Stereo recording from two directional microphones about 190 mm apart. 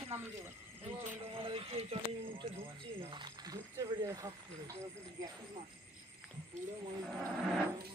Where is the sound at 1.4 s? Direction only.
30° right (ahead or behind).